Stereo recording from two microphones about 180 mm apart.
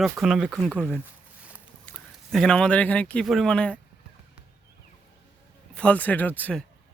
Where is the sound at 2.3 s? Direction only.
5° left (ahead or behind).